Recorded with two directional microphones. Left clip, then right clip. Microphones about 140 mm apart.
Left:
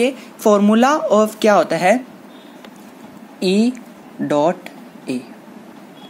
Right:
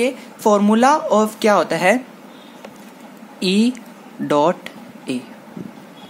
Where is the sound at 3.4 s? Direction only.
10° right (ahead or behind).